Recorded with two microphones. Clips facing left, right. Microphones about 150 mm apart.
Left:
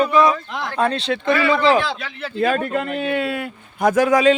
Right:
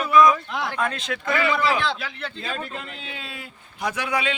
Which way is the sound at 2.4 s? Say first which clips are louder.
Left 15 dB; 60° left (ahead or behind).